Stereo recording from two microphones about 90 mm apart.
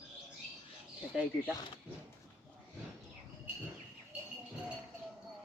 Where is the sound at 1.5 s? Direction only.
55° left (ahead or behind).